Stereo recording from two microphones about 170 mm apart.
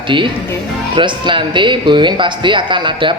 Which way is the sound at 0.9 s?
30° right (ahead or behind).